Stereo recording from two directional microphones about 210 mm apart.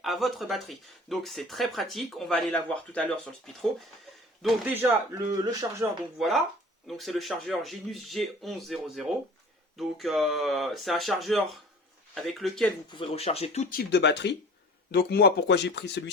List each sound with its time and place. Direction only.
0.0 s speech: centre (ahead or behind)
4.4 s speech: 10° right (ahead or behind)
6.1 s speech: centre (ahead or behind)
12.9 s speech: 25° left (ahead or behind); by 16.0 s 55° left (ahead or behind)